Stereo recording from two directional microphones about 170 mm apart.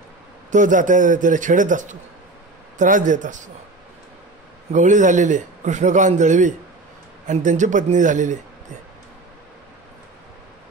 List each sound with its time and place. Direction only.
0.5 s a man's voice: 50° right (ahead or behind)
4.7 s a man's voice: 45° right (ahead or behind)